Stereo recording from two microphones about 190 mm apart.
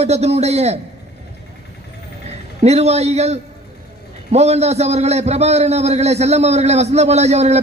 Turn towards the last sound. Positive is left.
turn(degrees=-35)  # may be behind; listen again after turning